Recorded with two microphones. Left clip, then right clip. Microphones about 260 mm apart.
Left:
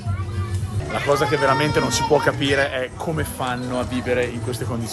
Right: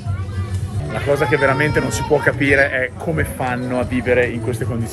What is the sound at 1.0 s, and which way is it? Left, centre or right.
Speech, centre.